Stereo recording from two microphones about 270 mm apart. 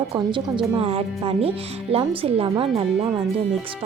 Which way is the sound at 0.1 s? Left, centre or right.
Centre.